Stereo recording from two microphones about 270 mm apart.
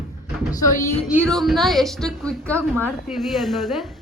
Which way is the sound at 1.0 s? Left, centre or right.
Centre.